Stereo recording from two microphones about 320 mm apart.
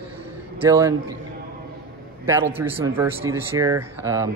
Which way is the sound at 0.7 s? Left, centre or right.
Centre.